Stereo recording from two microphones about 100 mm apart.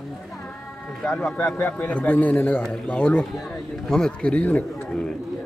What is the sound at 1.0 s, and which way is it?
Speech, 5° left (ahead or behind).